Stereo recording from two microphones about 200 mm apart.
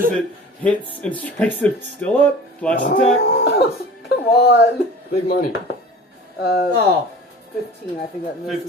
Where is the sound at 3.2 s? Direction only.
50° left (ahead or behind).